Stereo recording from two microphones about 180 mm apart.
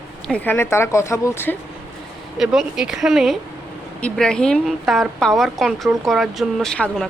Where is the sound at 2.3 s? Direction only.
Centre (ahead or behind).